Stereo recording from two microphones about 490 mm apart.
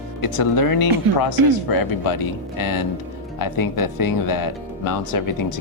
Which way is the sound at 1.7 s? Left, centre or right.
Left.